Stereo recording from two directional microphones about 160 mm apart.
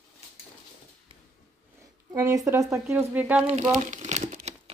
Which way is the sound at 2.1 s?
20° right (ahead or behind).